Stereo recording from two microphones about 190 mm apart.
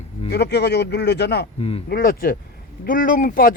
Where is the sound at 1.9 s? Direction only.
50° left (ahead or behind).